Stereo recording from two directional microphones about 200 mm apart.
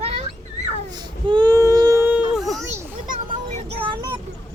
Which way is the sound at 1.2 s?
20° right (ahead or behind).